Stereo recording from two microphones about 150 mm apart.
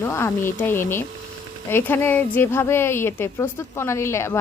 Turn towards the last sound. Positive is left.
turn(degrees=20)  # may be behind; listen again after turning